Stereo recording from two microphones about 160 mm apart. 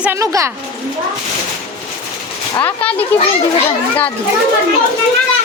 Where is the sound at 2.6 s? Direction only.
10° left (ahead or behind).